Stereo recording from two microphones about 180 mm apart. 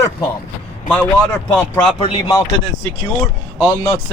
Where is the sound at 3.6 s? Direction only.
15° left (ahead or behind).